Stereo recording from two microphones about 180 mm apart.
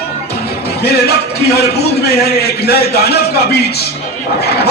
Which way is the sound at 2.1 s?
60° left (ahead or behind).